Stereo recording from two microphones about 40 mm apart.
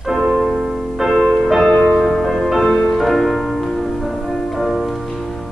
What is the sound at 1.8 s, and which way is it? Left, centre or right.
Music, centre.